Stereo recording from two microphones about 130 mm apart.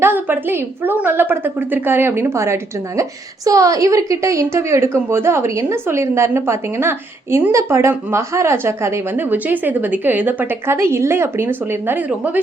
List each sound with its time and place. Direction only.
0.0 s a woman's voice: 15° right (ahead or behind)